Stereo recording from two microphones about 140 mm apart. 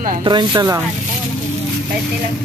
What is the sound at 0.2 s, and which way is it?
Speech, 30° right (ahead or behind).